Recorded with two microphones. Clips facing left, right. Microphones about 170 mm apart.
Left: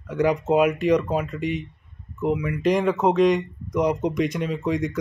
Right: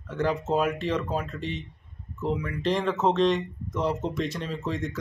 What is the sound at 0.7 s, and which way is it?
Speech, centre (ahead or behind).